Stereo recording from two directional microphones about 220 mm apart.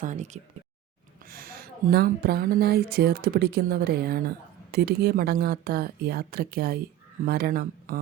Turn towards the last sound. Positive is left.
turn(degrees=-45)  # may be behind; listen again after turning